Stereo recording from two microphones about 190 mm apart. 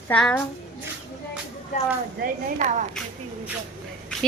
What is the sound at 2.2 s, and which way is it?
Speech, 45° right (ahead or behind).